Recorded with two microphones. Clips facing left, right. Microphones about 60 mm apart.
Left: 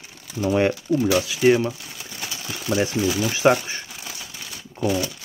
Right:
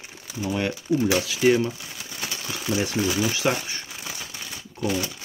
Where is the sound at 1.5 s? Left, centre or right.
Centre.